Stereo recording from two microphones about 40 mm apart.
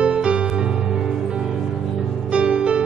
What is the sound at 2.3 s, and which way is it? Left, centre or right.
Music, right.